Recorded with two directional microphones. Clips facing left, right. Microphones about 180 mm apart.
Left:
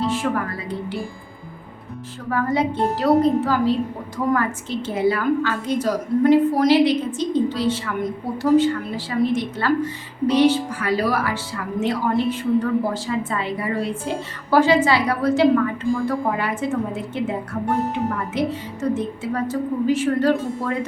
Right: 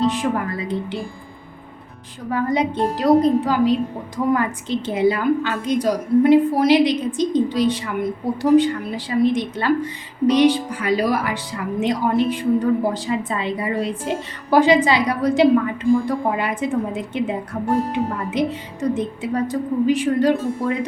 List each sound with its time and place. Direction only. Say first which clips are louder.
0.0 s speech: right 2 dB; 20° right (ahead or behind)
2.3 s a woman's voice: right 1 dB; 20° right (ahead or behind)